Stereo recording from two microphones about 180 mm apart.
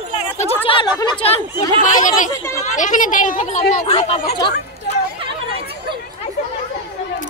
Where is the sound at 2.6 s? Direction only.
45° left (ahead or behind); by 4.5 s 25° left (ahead or behind).